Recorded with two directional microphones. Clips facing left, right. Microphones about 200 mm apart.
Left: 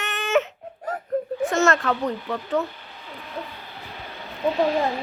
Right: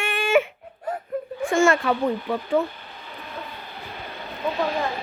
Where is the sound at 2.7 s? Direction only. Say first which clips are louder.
Even; 50° right (ahead or behind).